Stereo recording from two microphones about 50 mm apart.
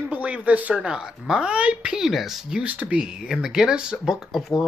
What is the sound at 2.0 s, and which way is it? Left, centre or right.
Speech, centre.